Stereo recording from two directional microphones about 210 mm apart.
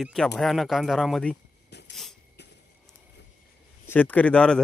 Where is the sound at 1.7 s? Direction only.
55° left (ahead or behind).